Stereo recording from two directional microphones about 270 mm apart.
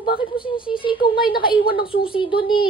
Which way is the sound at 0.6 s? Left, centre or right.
Centre.